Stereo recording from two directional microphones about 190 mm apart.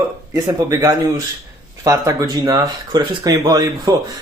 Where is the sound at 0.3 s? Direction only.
15° right (ahead or behind).